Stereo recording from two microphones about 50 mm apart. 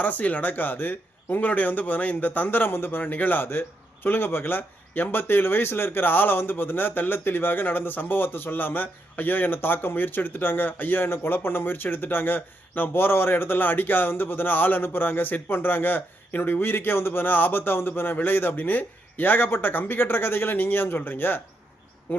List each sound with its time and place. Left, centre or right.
0.0 s a man's voice: left